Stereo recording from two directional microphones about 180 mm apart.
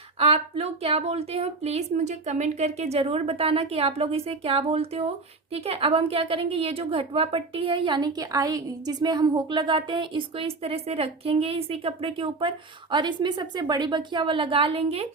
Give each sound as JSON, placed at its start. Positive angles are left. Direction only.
{"t": 0.2, "sound": "a woman's voice", "side_deg": -35}